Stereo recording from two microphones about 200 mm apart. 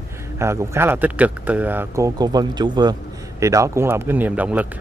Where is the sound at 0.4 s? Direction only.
15° right (ahead or behind).